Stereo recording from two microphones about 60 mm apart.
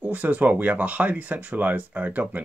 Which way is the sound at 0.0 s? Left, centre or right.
Right.